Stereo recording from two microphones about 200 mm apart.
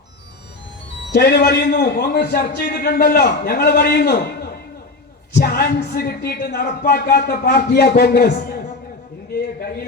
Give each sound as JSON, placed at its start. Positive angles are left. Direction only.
{"t": 1.1, "sound": "speech", "side_deg": 50}
{"t": 5.3, "sound": "speech", "side_deg": 50}